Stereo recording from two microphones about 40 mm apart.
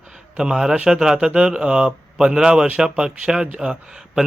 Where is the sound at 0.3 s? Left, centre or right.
Centre.